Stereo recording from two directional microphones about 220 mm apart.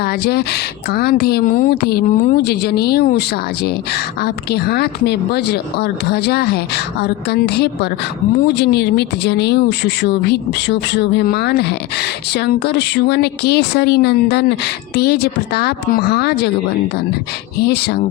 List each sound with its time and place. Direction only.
0.0 s speech: 45° left (ahead or behind)
17.6 s speech: 50° left (ahead or behind)